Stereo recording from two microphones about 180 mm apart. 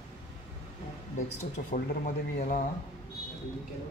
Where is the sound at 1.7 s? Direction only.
50° left (ahead or behind).